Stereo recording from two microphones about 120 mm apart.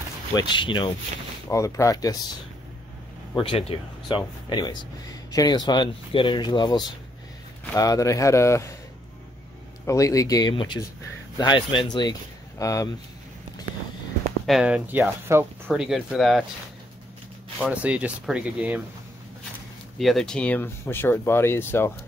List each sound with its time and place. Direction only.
0.4 s speech: 40° left (ahead or behind)
1.5 s speech: 25° left (ahead or behind)
3.3 s speech: 55° left (ahead or behind); by 8.7 s 25° left (ahead or behind)
9.8 s speech: 25° left (ahead or behind)
10.5 s speech: 45° left (ahead or behind); by 12.9 s 30° left (ahead or behind)
14.4 s speech: 5° right (ahead or behind)
15.2 s speech: 20° right (ahead or behind)
15.7 s speech: 5° right (ahead or behind)
17.6 s speech: 10° right (ahead or behind)
20.0 s speech: centre (ahead or behind); by 21.9 s 20° left (ahead or behind)